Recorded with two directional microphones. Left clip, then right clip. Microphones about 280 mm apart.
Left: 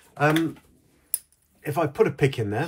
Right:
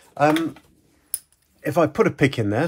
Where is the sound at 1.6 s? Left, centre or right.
Right.